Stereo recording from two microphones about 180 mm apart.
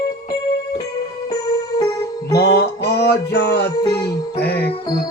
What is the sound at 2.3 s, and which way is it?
Music, 60° left (ahead or behind).